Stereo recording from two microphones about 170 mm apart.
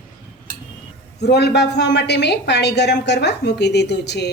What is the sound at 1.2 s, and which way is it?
A woman's voice, 80° left.